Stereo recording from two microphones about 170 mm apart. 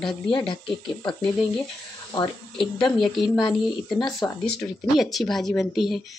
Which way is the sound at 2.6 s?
Centre (ahead or behind).